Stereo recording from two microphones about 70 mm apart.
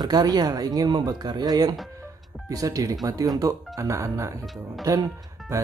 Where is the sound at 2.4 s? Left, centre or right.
Right.